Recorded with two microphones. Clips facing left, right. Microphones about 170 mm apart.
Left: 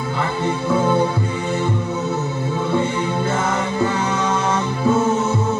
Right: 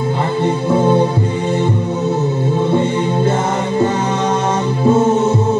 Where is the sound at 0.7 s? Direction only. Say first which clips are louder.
Right 4 dB; 25° right (ahead or behind).